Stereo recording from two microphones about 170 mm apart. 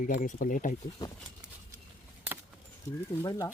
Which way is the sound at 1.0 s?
20° left (ahead or behind).